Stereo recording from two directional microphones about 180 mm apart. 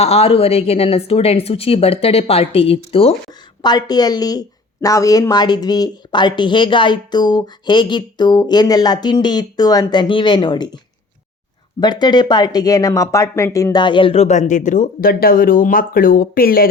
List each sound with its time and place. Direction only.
0.0 s a woman's voice: 35° left (ahead or behind)
11.8 s a woman's voice: 25° left (ahead or behind); by 16.6 s 55° left (ahead or behind)